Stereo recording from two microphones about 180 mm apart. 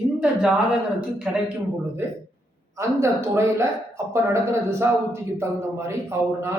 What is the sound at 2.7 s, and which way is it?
Speech, 15° right (ahead or behind).